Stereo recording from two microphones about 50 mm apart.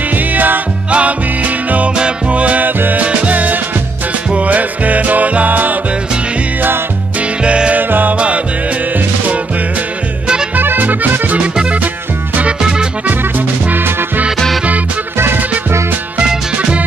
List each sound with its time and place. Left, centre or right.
0.1 s music: right
7.4 s music: right
7.7 s music: right
10.5 s music: right
13.7 s music: right
15.1 s music: right
16.2 s music: right